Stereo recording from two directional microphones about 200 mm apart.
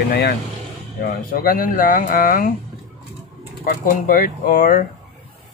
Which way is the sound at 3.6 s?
45° left (ahead or behind).